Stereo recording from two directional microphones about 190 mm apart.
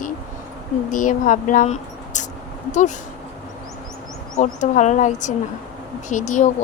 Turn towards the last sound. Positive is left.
turn(degrees=40)  # may be behind; listen again after turning